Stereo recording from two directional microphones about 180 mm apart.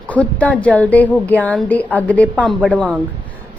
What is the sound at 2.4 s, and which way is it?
Speech, 5° right (ahead or behind).